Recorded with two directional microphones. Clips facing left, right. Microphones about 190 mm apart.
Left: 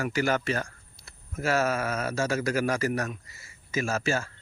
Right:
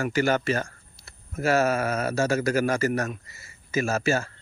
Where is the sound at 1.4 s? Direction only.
50° right (ahead or behind).